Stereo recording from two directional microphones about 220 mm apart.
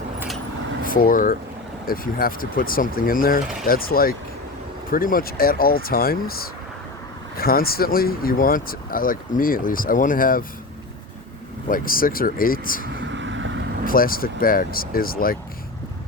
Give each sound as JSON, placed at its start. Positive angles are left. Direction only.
{"t": 0.9, "sound": "speech", "side_deg": 40}
{"t": 11.7, "sound": "speech", "side_deg": 40}
{"t": 13.0, "sound": "vehicle", "side_deg": -55}
{"t": 13.8, "sound": "speech", "side_deg": 40}